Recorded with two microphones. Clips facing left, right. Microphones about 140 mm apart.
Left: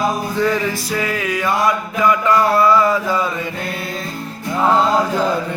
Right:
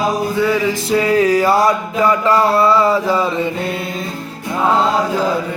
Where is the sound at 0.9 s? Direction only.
25° right (ahead or behind).